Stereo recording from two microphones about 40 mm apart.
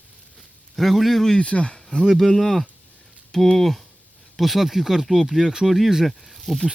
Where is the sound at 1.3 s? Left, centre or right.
Left.